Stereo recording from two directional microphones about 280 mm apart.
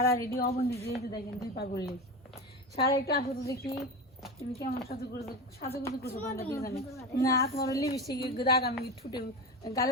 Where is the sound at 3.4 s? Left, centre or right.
Centre.